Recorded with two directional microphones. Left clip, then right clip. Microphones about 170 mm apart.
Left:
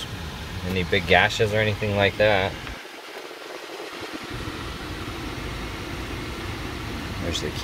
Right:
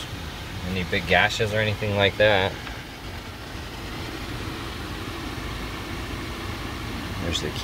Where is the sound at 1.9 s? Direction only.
5° right (ahead or behind).